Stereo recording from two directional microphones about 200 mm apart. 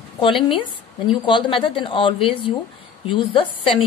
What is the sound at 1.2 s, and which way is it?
A woman's voice, 25° left (ahead or behind).